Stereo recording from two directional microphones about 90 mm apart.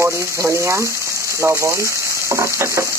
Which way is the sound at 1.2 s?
35° right (ahead or behind).